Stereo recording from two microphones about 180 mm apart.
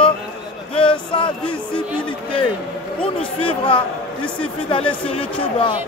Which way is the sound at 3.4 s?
30° left (ahead or behind).